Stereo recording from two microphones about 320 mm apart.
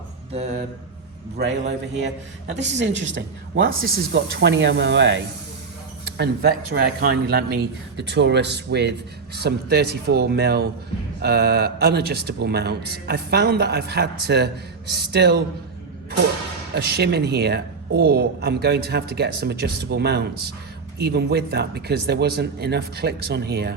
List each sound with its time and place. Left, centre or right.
1.4 s a man's voice: right
16.7 s a man's voice: right